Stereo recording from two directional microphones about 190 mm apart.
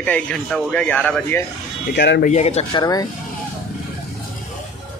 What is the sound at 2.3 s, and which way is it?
Speech, 35° left (ahead or behind).